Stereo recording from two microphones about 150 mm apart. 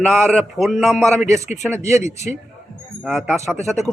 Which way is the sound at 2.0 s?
50° left (ahead or behind).